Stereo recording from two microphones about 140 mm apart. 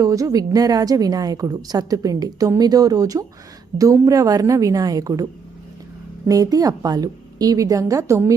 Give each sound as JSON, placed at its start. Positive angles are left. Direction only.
{"t": 0.0, "sound": "a woman's voice", "side_deg": -25}